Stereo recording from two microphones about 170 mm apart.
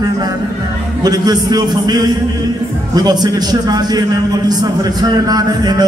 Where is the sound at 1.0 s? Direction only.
25° right (ahead or behind).